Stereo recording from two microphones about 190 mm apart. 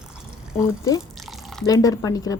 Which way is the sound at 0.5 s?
15° left (ahead or behind).